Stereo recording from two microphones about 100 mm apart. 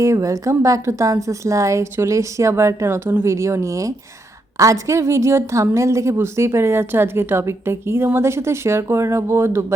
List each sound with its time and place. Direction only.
0.0 s a woman's voice: 30° right (ahead or behind)